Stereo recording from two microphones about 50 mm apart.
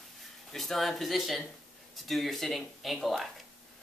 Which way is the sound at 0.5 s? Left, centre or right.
Centre.